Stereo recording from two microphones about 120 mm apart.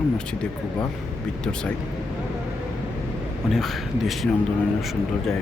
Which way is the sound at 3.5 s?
Centre (ahead or behind).